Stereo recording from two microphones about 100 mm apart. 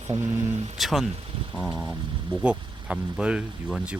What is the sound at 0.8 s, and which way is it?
Speech, centre (ahead or behind).